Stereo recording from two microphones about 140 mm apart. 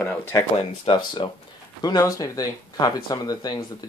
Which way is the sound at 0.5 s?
40° left (ahead or behind).